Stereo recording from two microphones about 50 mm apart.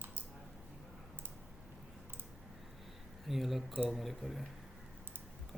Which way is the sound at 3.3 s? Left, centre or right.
Centre.